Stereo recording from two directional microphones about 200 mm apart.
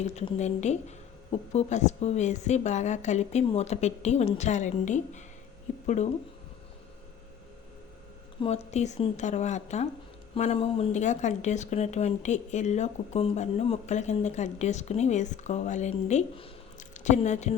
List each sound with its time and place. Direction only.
0.0 s speech: 35° left (ahead or behind)
8.4 s speech: 30° left (ahead or behind)